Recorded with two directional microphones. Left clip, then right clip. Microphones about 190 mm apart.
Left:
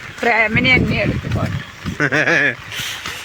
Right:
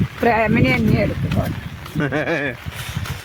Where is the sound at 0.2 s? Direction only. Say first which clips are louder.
Left 2 dB; 45° right (ahead or behind).